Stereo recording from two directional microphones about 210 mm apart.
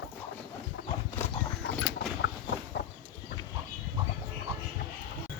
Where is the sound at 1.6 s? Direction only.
60° left (ahead or behind).